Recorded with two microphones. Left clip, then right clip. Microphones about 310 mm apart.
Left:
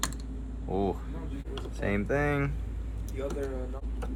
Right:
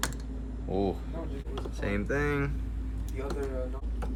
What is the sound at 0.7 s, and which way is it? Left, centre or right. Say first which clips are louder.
Speech: even; centre.